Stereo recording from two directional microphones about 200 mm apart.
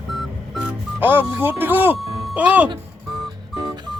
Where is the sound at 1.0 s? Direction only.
10° right (ahead or behind).